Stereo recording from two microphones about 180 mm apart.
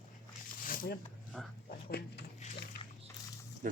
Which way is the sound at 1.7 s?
60° left (ahead or behind).